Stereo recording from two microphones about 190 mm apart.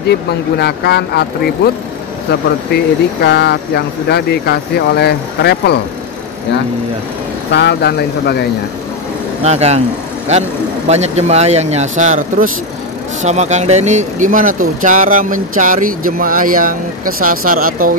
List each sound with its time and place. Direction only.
0.6 s speech: 60° left (ahead or behind)
2.7 s speech: 60° left (ahead or behind)
7.5 s speech: 60° left (ahead or behind)
9.4 s speech: 35° right (ahead or behind)
10.9 s speech: 35° right (ahead or behind)